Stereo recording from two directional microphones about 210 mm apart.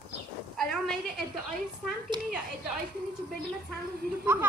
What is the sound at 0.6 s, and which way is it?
Speech, centre (ahead or behind).